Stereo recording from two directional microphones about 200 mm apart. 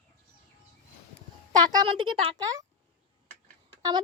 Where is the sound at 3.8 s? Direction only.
20° right (ahead or behind).